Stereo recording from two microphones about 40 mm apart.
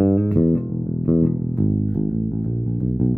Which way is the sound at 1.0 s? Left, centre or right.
Centre.